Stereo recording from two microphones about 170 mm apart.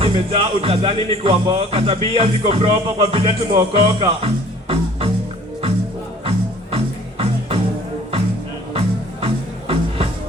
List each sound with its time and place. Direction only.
0.0 s music: 35° right (ahead or behind)
6.2 s music: 35° right (ahead or behind)
9.2 s music: 35° right (ahead or behind)